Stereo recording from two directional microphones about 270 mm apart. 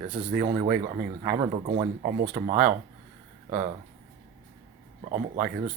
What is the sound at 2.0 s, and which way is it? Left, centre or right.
Speech, right.